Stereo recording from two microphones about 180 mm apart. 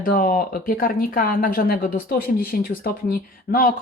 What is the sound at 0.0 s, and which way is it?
Speech, 50° left (ahead or behind).